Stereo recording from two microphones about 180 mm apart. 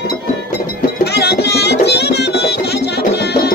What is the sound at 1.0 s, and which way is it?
Music, 65° left (ahead or behind).